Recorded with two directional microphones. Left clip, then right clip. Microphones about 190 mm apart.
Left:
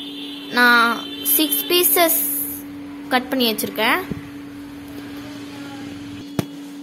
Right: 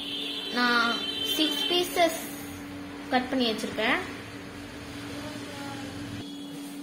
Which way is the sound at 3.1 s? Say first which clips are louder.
Left 7 dB; 65° left (ahead or behind).